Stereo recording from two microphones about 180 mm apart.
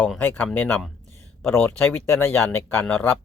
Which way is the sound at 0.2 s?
10° left (ahead or behind).